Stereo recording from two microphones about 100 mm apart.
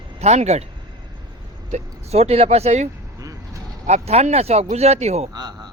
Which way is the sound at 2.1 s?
90° right.